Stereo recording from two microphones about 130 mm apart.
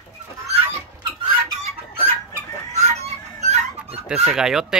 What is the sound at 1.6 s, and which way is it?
Chicken, 55° right (ahead or behind).